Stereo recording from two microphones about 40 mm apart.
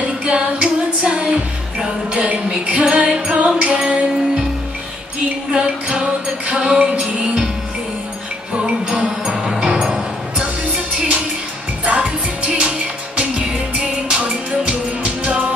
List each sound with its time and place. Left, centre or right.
0.2 s female singing: right
2.1 s music: right
3.7 s music: centre
5.5 s music: centre
8.5 s music: right
9.3 s music: centre
11.8 s music: right